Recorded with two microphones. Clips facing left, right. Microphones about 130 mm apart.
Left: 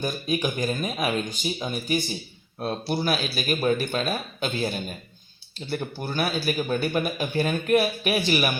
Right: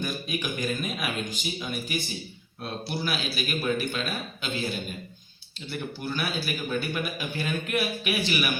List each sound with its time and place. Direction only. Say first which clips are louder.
0.0 s speech: left 5 dB; 35° left (ahead or behind)